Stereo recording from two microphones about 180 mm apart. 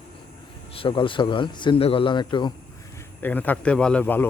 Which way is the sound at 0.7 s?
30° left (ahead or behind).